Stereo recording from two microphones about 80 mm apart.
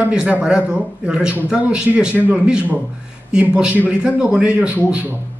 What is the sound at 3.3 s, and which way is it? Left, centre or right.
A man's voice, centre.